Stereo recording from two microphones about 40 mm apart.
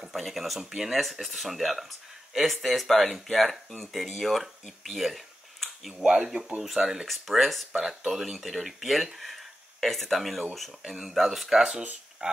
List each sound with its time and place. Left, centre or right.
0.1 s speech: centre
7.1 s speech: centre
12.2 s speech: right